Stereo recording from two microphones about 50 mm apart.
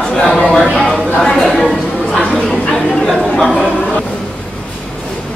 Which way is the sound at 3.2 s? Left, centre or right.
Left.